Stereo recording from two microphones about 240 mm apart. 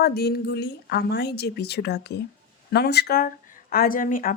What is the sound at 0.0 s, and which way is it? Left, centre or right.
A woman's voice, left.